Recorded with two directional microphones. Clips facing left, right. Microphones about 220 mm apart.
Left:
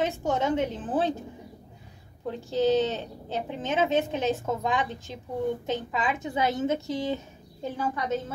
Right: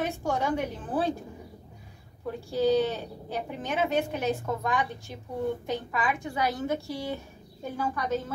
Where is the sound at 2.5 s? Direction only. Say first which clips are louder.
Left 1 dB; 20° left (ahead or behind).